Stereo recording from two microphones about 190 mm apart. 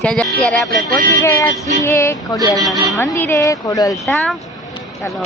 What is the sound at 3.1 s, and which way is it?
Speech, 15° left (ahead or behind).